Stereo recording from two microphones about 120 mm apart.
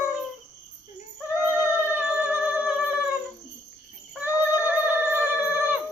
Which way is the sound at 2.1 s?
10° right (ahead or behind).